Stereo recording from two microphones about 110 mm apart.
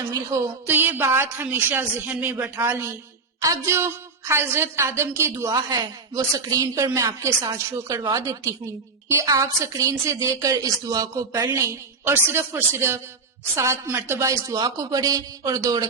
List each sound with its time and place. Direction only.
0.1 s a woman's voice: 30° right (ahead or behind)